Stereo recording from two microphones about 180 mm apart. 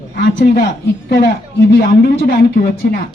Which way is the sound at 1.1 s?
70° left (ahead or behind).